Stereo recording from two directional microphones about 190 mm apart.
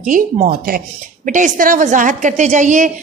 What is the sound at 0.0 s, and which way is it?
Speech, 45° right (ahead or behind).